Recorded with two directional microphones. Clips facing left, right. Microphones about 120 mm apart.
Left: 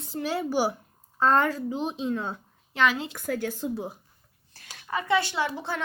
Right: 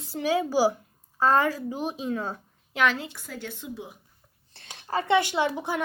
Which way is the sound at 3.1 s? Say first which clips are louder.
Left 8 dB; 50° left (ahead or behind).